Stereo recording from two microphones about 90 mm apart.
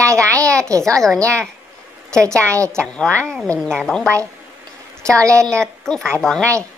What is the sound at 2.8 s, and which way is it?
A woman's voice, 10° left (ahead or behind).